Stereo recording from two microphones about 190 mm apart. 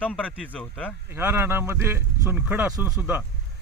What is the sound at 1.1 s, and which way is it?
Speech, 10° right (ahead or behind).